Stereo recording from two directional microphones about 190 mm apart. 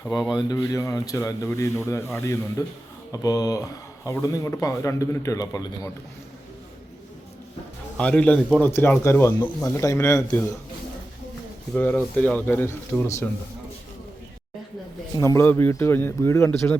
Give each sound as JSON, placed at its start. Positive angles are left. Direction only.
{"t": 0.3, "sound": "speech", "side_deg": 20}
{"t": 7.9, "sound": "speech", "side_deg": 5}
{"t": 11.7, "sound": "speech", "side_deg": 10}
{"t": 15.1, "sound": "speech", "side_deg": 15}